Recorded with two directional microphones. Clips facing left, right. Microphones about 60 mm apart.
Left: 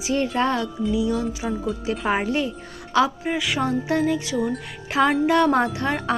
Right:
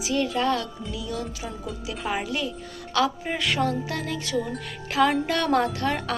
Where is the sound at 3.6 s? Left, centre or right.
Left.